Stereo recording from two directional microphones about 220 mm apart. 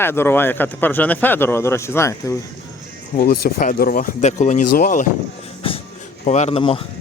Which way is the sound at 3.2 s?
45° left (ahead or behind).